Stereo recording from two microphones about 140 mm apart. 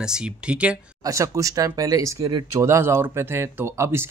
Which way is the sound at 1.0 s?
20° right (ahead or behind).